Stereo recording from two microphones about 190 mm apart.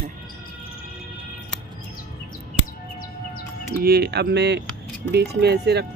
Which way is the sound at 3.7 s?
55° right (ahead or behind).